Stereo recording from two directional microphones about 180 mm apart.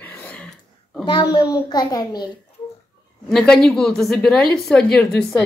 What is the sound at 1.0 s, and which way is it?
A child's voice, 25° left (ahead or behind).